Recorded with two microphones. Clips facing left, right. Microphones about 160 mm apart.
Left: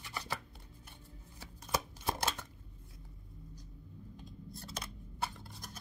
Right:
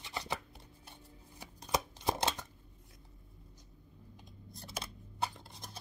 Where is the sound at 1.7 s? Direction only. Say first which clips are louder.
Right 2 dB; 15° right (ahead or behind).